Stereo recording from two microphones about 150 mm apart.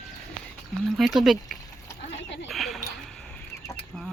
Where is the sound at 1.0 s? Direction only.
Centre (ahead or behind).